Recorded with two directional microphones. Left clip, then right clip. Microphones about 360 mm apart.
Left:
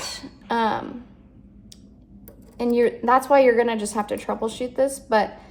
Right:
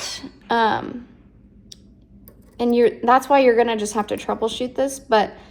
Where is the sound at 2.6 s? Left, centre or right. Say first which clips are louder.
Right 3 dB; right.